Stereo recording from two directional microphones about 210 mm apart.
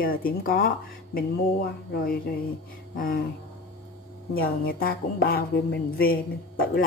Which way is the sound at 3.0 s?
40° left (ahead or behind).